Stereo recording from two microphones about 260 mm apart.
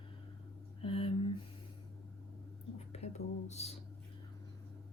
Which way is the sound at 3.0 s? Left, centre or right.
Left.